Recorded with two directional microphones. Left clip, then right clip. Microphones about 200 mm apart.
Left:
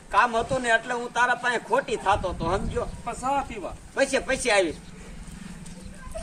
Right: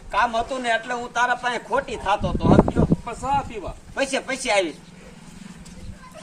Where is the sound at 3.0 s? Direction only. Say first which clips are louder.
Right 3 dB; 15° left (ahead or behind).